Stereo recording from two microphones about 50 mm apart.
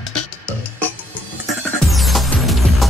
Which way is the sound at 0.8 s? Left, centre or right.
Left.